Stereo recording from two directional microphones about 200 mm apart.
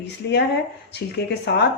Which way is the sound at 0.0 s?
55° left (ahead or behind).